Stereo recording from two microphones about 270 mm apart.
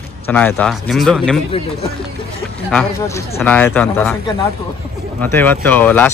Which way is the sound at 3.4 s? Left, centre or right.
Centre.